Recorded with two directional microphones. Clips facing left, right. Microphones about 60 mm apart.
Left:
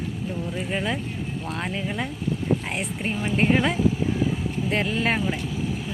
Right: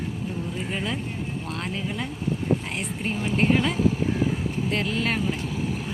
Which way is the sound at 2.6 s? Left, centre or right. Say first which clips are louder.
Left 1 dB; left.